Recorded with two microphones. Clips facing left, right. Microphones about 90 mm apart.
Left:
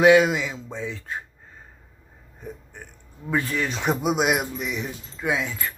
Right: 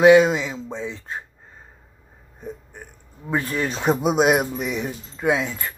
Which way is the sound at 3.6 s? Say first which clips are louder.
Right 3 dB; 35° right (ahead or behind).